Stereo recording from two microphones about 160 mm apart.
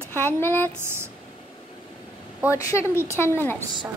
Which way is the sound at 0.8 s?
15° right (ahead or behind).